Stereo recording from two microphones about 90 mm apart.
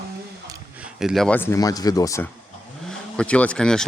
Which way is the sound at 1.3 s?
25° left (ahead or behind).